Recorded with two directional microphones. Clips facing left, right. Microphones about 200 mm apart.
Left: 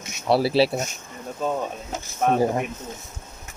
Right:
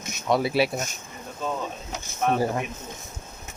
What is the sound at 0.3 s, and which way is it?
Speech, 35° left (ahead or behind).